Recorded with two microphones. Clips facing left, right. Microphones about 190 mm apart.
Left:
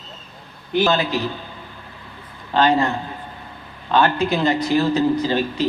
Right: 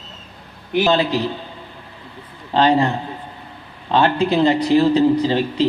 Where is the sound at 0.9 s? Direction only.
30° right (ahead or behind).